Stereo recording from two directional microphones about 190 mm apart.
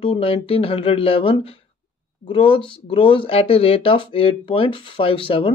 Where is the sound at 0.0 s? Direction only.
25° left (ahead or behind).